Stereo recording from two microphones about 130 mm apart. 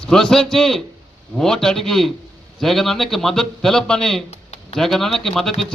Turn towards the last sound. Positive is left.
turn(degrees=0)  # may be behind; listen again after turning